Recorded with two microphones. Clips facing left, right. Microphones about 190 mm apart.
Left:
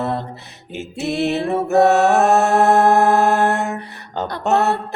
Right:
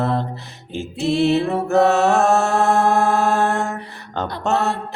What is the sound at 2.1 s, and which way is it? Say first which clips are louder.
Mantra: left 2 dB; 20° left (ahead or behind).